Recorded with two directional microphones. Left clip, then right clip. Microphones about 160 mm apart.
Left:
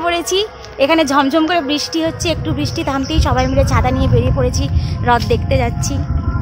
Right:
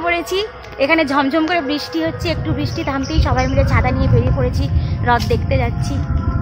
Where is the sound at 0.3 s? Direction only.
30° left (ahead or behind).